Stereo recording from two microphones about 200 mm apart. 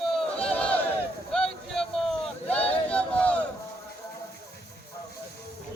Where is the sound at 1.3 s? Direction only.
Centre (ahead or behind).